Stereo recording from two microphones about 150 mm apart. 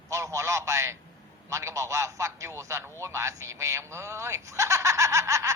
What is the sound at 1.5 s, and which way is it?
A man's voice, 20° right (ahead or behind).